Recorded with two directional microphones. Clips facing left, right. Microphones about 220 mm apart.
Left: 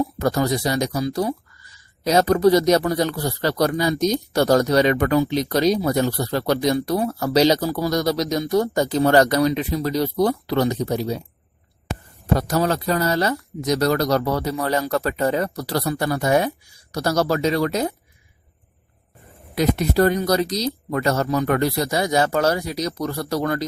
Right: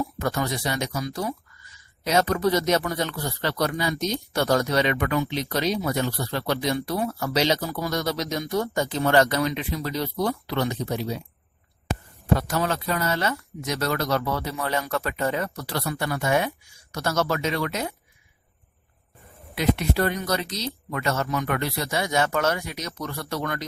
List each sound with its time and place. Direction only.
0.2 s speech: 40° left (ahead or behind)
12.3 s speech: 40° left (ahead or behind)
19.5 s speech: 40° left (ahead or behind)